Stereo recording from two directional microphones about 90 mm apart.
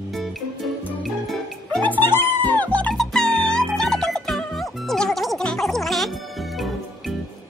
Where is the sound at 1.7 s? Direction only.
20° left (ahead or behind).